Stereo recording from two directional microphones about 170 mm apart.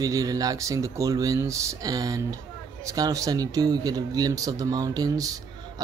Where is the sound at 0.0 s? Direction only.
20° right (ahead or behind).